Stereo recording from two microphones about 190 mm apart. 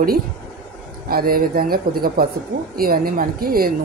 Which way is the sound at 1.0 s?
50° right (ahead or behind).